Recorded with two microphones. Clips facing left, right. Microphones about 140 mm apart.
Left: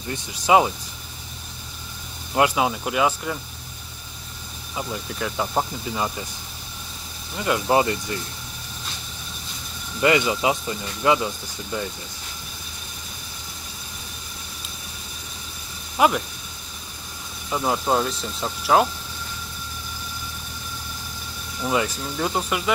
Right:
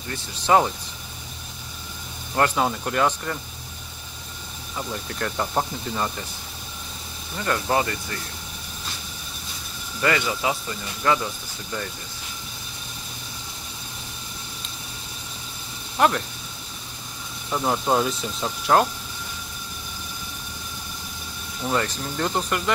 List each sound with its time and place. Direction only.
0.1 s speech: 10° left (ahead or behind)
2.3 s speech: 10° left (ahead or behind)
4.7 s speech: 5° left (ahead or behind)
7.3 s speech: 10° left (ahead or behind)
10.0 s speech: 20° left (ahead or behind)
16.0 s speech: 5° left (ahead or behind)
17.5 s speech: 5° left (ahead or behind)
21.6 s speech: 5° left (ahead or behind)